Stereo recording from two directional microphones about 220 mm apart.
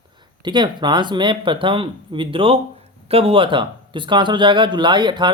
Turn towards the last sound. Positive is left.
turn(degrees=-20)  # may be behind; listen again after turning